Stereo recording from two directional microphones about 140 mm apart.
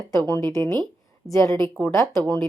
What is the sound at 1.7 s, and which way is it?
Speech, 15° left (ahead or behind).